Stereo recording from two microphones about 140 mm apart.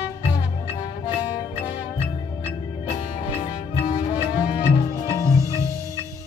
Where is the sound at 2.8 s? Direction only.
45° left (ahead or behind).